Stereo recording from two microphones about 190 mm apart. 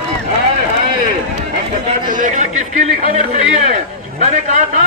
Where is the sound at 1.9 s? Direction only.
45° right (ahead or behind).